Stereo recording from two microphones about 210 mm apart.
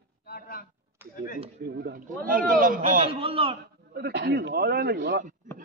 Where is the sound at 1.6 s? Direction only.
50° right (ahead or behind).